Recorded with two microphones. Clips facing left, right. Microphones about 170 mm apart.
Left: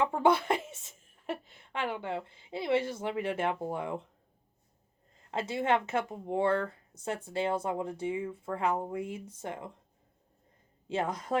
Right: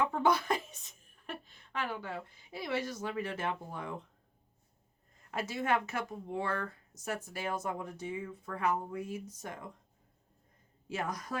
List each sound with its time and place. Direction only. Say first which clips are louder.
0.2 s a woman's voice: left 4 dB; 25° left (ahead or behind)
5.3 s speech: left 3 dB; 25° left (ahead or behind)
10.8 s speech: left 5 dB; 25° left (ahead or behind)